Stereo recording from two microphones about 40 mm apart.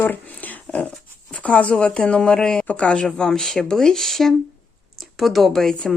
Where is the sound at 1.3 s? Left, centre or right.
Left.